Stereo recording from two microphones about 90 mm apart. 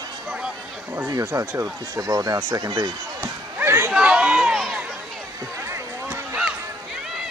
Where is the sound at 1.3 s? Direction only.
35° right (ahead or behind).